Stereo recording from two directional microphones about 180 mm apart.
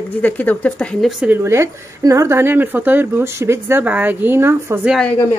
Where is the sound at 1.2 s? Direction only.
10° right (ahead or behind).